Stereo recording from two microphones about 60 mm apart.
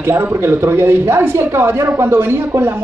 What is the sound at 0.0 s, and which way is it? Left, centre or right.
A man's voice, right.